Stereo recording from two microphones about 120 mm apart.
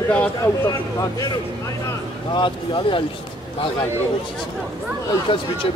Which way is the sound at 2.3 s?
40° left (ahead or behind).